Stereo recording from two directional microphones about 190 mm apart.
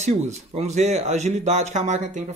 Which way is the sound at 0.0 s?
35° right (ahead or behind).